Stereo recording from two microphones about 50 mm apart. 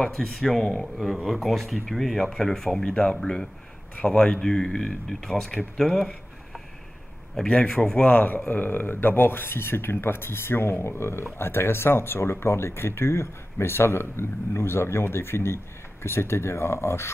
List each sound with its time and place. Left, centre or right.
0.0 s speech: centre
7.4 s speech: centre; by 17.1 s left